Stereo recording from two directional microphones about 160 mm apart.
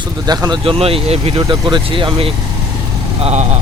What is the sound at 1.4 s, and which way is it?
Speech, 25° right (ahead or behind).